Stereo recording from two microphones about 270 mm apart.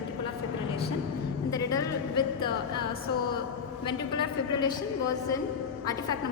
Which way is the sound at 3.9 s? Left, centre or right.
Centre.